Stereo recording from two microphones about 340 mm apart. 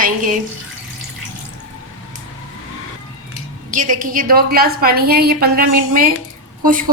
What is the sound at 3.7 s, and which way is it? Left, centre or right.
A woman's voice, right.